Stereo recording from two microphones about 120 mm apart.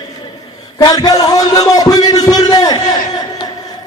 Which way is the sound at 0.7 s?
35° left (ahead or behind).